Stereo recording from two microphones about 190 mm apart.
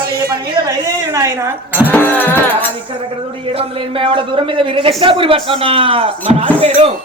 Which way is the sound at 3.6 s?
25° right (ahead or behind).